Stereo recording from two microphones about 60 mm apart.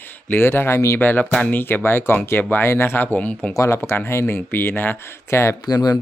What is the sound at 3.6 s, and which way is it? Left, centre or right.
Speech, left.